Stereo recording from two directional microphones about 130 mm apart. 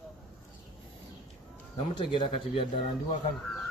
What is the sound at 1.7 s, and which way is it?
Speech, 40° left (ahead or behind).